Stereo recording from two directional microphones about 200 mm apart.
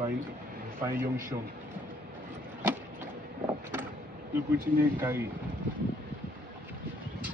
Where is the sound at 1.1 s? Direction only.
15° right (ahead or behind).